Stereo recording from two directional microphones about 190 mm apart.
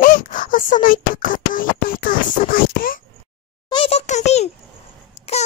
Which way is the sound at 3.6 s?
25° left (ahead or behind).